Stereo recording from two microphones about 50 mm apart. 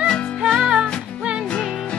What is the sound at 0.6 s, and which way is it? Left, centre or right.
Music, centre.